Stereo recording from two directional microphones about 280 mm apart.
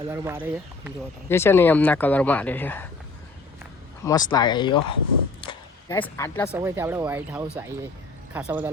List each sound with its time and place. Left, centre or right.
0.1 s speech: centre
1.3 s speech: centre
4.0 s speech: centre
5.4 s a sound: centre
6.0 s speech: centre
6.5 s speech: centre